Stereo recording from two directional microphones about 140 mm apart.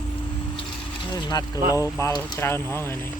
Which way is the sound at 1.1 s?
30° left (ahead or behind).